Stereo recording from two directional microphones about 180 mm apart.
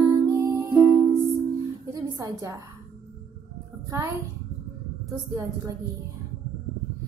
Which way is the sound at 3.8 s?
20° right (ahead or behind).